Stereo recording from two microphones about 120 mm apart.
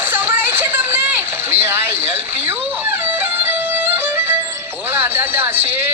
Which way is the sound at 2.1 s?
20° right (ahead or behind).